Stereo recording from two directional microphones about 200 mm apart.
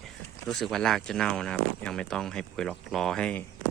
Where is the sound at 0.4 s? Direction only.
Centre (ahead or behind).